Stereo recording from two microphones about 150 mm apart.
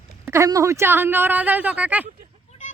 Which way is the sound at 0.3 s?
20° right (ahead or behind).